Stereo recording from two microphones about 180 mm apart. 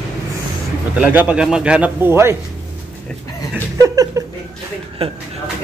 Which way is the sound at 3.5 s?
15° right (ahead or behind).